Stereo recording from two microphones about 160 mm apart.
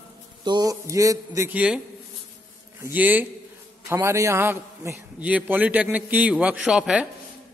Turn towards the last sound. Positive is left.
turn(degrees=-5)  # may be behind; listen again after turning